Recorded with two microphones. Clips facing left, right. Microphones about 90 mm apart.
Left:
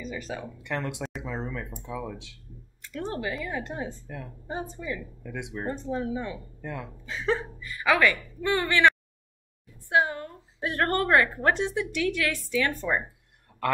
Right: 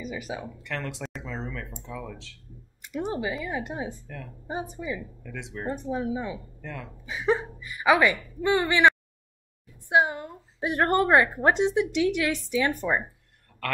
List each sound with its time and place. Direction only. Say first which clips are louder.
0.0 s a woman's voice: right 1 dB; 10° right (ahead or behind)
0.6 s speech: left 2 dB; 20° left (ahead or behind)
2.8 s a woman's voice: right 3 dB; 15° right (ahead or behind)
5.2 s speech: left 2 dB; 15° left (ahead or behind)
5.7 s a woman's voice: right 2 dB; 15° right (ahead or behind)
6.6 s speech: left 2 dB; 15° left (ahead or behind)
7.1 s a woman's voice: right 3 dB; 15° right (ahead or behind)
13.5 s a sound: left 4 dB; 15° left (ahead or behind)